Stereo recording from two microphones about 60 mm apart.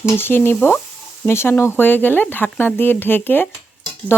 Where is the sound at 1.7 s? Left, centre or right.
Left.